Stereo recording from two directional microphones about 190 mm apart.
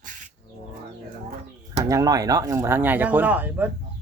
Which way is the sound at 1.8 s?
15° right (ahead or behind).